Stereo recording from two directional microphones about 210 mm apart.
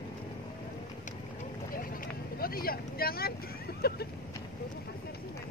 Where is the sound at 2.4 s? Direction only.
45° left (ahead or behind).